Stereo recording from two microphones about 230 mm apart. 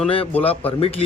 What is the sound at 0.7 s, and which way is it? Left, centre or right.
Speech, left.